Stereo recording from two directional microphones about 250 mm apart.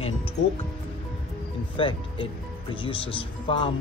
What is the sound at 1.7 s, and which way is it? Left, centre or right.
Speech, left.